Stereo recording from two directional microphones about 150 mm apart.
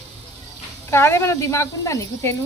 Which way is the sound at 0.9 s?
15° left (ahead or behind).